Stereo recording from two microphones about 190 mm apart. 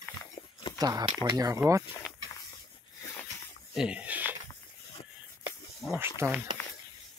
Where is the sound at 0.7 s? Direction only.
20° right (ahead or behind).